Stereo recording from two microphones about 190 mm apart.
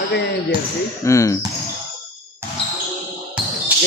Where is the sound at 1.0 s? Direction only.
15° left (ahead or behind).